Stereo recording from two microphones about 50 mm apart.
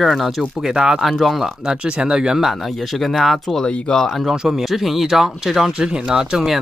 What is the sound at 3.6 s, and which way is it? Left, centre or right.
Speech, centre.